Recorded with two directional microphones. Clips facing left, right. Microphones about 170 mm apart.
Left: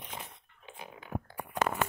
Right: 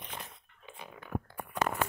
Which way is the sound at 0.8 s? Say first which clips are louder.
Right 1 dB; 25° left (ahead or behind).